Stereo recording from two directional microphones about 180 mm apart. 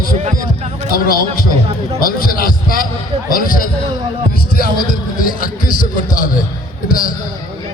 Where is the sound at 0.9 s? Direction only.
55° left (ahead or behind).